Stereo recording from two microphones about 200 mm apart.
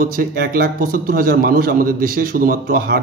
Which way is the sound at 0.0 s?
45° right (ahead or behind).